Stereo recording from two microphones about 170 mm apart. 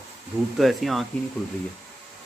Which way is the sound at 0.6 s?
Centre (ahead or behind).